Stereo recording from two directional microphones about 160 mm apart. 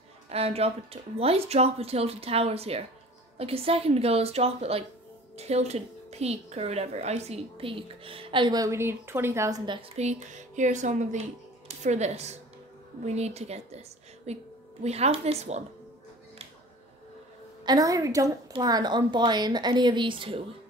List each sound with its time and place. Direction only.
0.3 s a woman's voice: 40° right (ahead or behind); by 9.6 s 15° right (ahead or behind)
9.7 s a woman's voice: 35° right (ahead or behind)
17.6 s a woman's voice: 20° right (ahead or behind)